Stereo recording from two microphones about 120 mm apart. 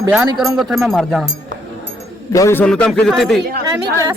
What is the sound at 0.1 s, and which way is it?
Speech, 5° right (ahead or behind).